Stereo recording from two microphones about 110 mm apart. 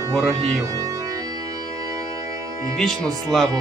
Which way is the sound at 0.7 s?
30° right (ahead or behind).